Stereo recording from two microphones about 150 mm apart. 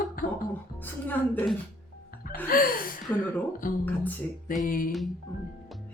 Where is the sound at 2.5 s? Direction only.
70° left (ahead or behind).